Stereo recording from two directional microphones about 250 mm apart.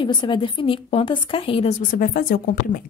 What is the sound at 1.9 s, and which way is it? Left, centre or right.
Speech, left.